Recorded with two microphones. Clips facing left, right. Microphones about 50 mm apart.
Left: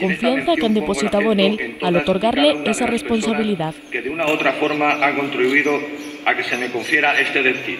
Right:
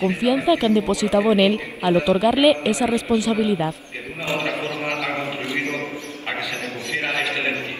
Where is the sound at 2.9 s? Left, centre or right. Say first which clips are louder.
Left 1 dB; left.